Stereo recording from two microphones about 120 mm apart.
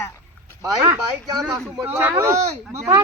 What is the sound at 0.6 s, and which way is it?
Speech, 25° right (ahead or behind).